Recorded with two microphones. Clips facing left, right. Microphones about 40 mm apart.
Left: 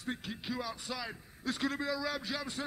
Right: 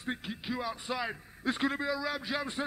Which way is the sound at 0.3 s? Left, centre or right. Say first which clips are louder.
Right 3 dB; centre.